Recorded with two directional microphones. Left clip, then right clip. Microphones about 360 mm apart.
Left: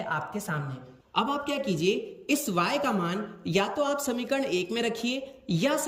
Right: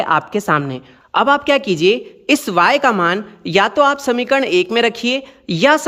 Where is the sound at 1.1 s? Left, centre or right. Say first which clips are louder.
Right 15 dB; centre.